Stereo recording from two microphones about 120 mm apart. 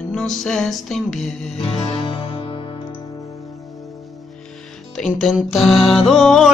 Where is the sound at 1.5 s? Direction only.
50° left (ahead or behind).